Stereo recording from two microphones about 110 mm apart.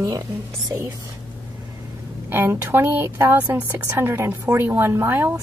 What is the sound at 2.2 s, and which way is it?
A woman's voice, 20° right (ahead or behind).